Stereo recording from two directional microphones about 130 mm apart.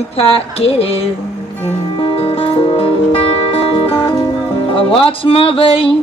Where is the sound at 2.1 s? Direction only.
45° left (ahead or behind).